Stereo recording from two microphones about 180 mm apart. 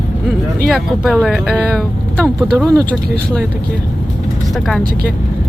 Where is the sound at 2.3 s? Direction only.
15° right (ahead or behind).